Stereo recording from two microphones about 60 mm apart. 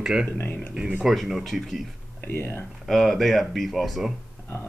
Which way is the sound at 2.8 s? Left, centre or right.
Centre.